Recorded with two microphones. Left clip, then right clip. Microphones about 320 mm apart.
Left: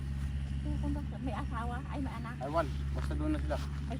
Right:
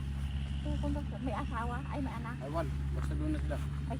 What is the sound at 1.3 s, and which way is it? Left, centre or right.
Speech, centre.